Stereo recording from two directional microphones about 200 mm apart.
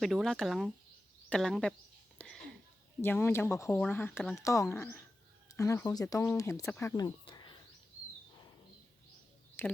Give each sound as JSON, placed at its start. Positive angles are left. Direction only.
{"t": 0.0, "sound": "speech", "side_deg": 0}
{"t": 2.1, "sound": "a sound", "side_deg": 0}
{"t": 3.0, "sound": "speech", "side_deg": 10}
{"t": 9.6, "sound": "speech", "side_deg": 10}